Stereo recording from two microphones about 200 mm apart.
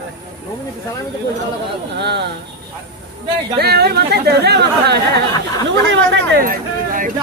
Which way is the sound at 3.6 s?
55° right (ahead or behind).